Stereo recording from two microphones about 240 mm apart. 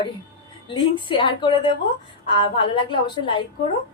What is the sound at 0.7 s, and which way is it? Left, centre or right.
A woman's voice, centre.